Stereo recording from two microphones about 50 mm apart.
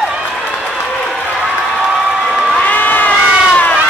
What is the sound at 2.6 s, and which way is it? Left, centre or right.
Crowd, left.